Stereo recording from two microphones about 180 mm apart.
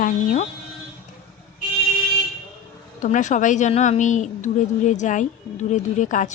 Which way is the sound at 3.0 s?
45° left (ahead or behind).